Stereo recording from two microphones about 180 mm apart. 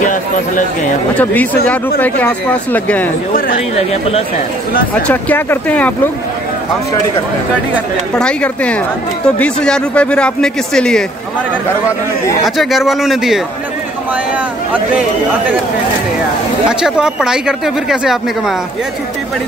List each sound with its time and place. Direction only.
0.0 s speech: 45° left (ahead or behind)
1.1 s speech: 10° left (ahead or behind)
3.7 s speech: 35° left (ahead or behind)
5.0 s speech: 10° left (ahead or behind)
8.1 s a woman's voice: 5° left (ahead or behind)
12.4 s a woman's voice: centre (ahead or behind)
16.6 s a woman's voice: 5° right (ahead or behind)